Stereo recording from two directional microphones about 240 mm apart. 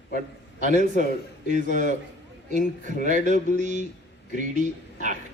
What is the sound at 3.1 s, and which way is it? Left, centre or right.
A man's voice, right.